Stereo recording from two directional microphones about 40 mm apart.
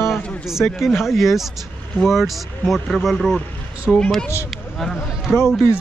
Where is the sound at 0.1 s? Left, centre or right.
Centre.